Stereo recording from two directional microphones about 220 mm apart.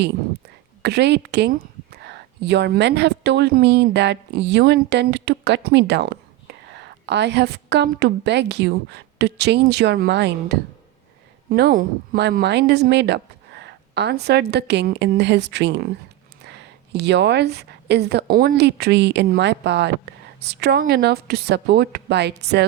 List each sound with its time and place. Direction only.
0.8 s a woman's voice: 50° right (ahead or behind)